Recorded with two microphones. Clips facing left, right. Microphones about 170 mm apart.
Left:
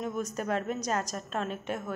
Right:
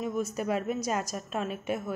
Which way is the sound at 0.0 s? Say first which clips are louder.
Right 2 dB; 10° right (ahead or behind).